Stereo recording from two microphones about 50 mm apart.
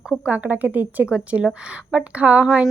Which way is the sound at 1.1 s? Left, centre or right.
Right.